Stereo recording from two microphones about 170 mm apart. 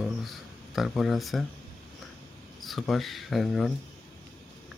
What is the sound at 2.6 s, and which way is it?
Speech, centre (ahead or behind).